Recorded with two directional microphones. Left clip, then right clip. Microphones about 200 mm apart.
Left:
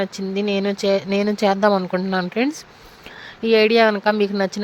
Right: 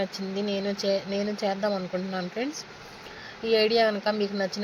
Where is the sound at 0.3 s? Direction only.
60° left (ahead or behind).